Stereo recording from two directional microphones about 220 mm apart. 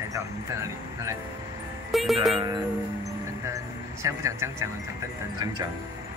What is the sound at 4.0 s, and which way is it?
Speech, 10° right (ahead or behind).